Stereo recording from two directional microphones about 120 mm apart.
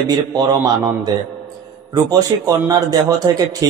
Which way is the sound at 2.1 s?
30° right (ahead or behind).